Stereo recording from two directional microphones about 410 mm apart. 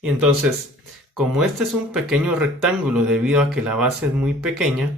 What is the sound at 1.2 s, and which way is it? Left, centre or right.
Speech, centre.